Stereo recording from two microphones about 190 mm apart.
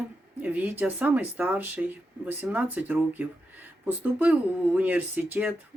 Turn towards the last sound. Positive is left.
turn(degrees=-10)  # may be behind; listen again after turning